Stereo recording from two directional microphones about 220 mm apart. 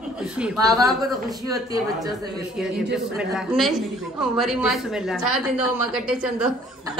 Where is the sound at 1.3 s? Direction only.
15° right (ahead or behind).